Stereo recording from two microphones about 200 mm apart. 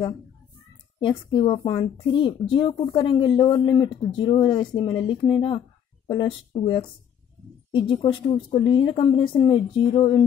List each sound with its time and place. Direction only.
0.9 s a woman's voice: 25° left (ahead or behind)